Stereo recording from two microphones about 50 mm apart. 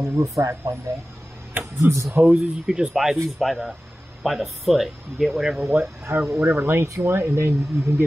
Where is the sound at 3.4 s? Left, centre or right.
Centre.